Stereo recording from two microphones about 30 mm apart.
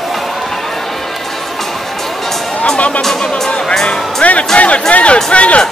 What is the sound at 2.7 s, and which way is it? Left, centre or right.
Music, left.